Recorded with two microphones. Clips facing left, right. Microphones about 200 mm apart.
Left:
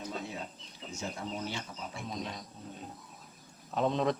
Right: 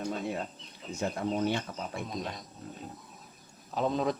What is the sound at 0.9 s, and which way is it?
Speech, 60° right (ahead or behind).